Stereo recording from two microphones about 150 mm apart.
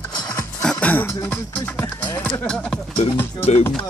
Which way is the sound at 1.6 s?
15° left (ahead or behind).